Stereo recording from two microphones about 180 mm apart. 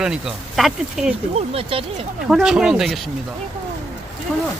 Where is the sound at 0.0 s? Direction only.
5° right (ahead or behind).